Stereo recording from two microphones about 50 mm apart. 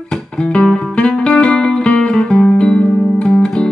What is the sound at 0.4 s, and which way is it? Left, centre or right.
Music, left.